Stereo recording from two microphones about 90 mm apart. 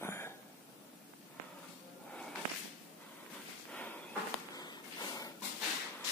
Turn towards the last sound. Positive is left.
turn(degrees=50)  # may be behind; listen again after turning